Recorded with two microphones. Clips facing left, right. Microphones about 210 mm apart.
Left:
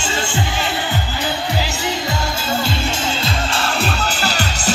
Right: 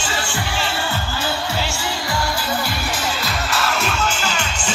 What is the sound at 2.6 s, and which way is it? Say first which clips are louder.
Music: left 3 dB; 25° left (ahead or behind).